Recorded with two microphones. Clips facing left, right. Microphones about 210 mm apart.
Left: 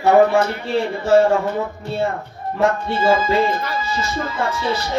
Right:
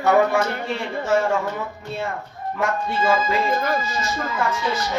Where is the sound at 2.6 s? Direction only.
30° left (ahead or behind).